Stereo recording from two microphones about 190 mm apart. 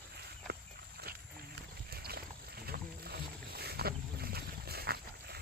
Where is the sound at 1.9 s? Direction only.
55° right (ahead or behind).